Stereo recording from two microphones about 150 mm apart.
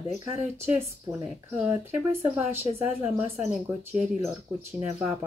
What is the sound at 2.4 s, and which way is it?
Speech, 15° right (ahead or behind).